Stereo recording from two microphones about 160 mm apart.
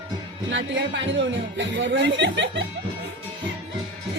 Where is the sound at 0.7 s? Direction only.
90° right.